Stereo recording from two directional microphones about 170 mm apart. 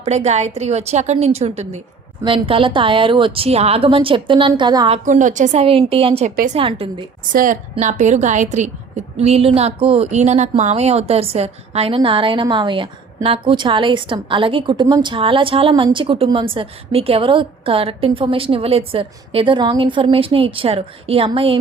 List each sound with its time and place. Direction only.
0.0 s a woman's voice: 40° right (ahead or behind)
4.9 s a woman's voice: 45° right (ahead or behind)
6.3 s a woman's voice: 50° right (ahead or behind)
6.6 s a woman's voice: 30° right (ahead or behind)
7.3 s a woman's voice: 50° right (ahead or behind); by 21.6 s 30° right (ahead or behind)